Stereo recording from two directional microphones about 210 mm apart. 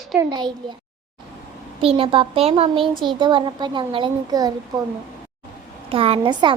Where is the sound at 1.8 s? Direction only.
25° right (ahead or behind).